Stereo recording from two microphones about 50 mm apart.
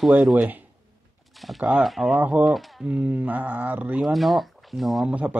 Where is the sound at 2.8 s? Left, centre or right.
Centre.